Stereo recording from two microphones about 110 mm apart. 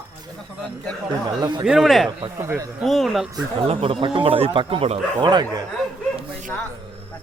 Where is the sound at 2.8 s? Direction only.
Centre (ahead or behind).